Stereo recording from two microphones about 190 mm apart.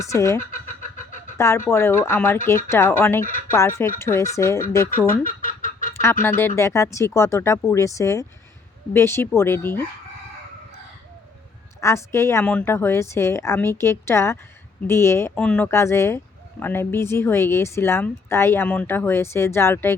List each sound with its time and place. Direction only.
0.0 s speech: 15° left (ahead or behind)
0.5 s vehicle: 45° left (ahead or behind)
1.4 s speech: 15° left (ahead or behind)
5.0 s duck: 45° left (ahead or behind)
5.9 s honk: 15° left (ahead or behind)
6.2 s speech: 10° left (ahead or behind)
11.8 s speech: 15° left (ahead or behind)